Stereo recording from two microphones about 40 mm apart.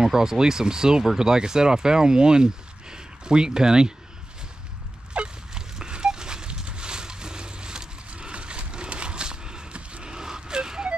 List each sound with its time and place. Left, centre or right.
0.0 s speech: centre
5.1 s fowl: right
8.1 s horse: right
10.0 s vehicle: centre